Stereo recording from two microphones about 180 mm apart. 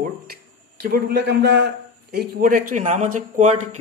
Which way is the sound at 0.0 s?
60° right (ahead or behind).